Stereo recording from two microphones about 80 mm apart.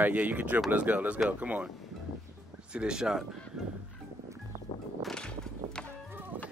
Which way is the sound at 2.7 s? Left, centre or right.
Centre.